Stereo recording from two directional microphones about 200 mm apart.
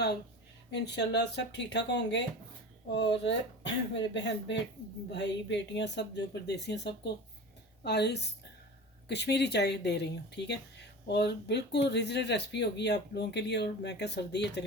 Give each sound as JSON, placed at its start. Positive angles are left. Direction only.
{"t": 0.7, "sound": "speech", "side_deg": 60}